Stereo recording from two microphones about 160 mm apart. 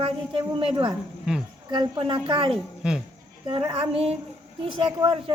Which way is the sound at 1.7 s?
30° right (ahead or behind).